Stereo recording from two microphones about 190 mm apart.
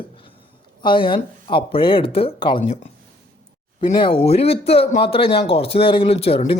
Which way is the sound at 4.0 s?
30° left (ahead or behind).